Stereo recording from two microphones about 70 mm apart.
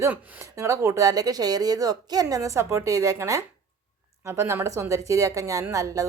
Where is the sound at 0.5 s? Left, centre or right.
Right.